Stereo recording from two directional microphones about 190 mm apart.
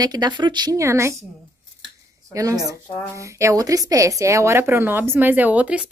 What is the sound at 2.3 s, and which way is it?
Speech, 15° right (ahead or behind).